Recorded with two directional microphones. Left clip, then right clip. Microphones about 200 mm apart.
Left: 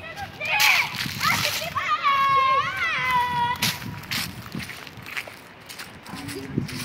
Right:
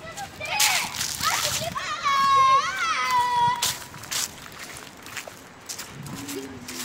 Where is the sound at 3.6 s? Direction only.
10° left (ahead or behind).